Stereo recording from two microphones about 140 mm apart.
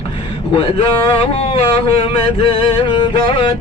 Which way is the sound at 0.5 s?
45° left (ahead or behind).